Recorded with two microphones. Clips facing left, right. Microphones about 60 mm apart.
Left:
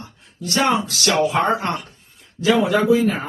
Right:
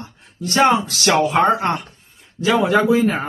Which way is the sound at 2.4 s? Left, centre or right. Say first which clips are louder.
Right 1 dB; right.